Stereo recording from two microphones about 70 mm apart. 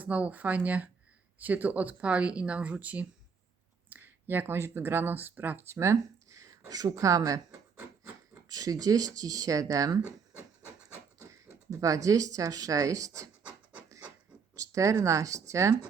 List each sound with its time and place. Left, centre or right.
0.0 s speech: right
5.7 s a sound: right
6.9 s speech: right
8.4 s speech: right
11.2 s speech: right
14.5 s a sound: right
15.0 s speech: right